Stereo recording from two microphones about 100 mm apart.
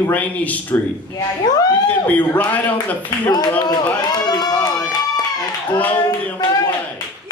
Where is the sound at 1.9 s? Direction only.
15° left (ahead or behind).